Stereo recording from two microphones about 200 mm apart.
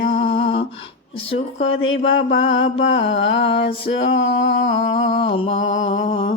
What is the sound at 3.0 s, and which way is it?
Mantra, 65° left (ahead or behind).